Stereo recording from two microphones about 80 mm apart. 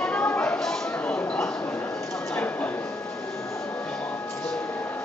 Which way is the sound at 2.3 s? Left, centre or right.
Centre.